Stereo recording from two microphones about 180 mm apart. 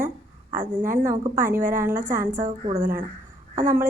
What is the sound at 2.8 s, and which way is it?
Speech, 55° right (ahead or behind).